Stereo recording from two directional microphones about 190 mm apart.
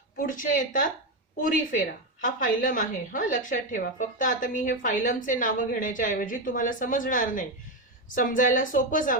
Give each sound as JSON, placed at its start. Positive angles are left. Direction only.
{"t": 0.2, "sound": "a woman's voice", "side_deg": 45}